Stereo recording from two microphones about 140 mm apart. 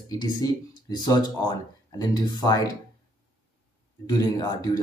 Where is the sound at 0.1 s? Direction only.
30° left (ahead or behind).